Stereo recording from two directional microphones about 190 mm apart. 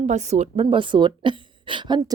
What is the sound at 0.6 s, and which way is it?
A woman's voice, 25° right (ahead or behind).